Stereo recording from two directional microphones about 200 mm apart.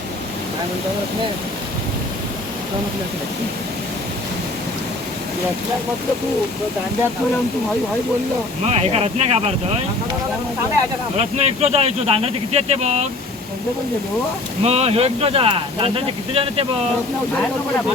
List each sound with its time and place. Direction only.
8.6 s speech: 30° right (ahead or behind)
11.2 s speech: 30° right (ahead or behind)
14.6 s speech: 30° right (ahead or behind)